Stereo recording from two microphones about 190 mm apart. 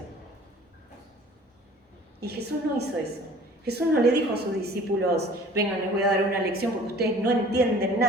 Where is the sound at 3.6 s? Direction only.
60° right (ahead or behind).